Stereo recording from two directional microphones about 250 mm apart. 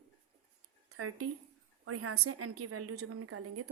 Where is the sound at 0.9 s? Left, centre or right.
Right.